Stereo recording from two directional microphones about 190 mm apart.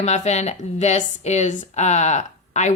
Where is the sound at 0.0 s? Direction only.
35° left (ahead or behind).